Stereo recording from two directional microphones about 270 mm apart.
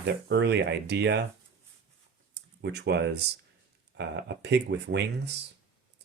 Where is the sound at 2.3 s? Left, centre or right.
Right.